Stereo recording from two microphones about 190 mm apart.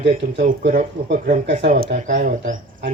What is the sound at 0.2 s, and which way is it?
Speech, 45° right (ahead or behind).